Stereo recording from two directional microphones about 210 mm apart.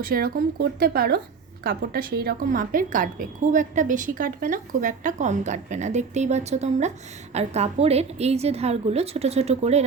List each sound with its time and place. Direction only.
0.0 s a woman's voice: 45° right (ahead or behind)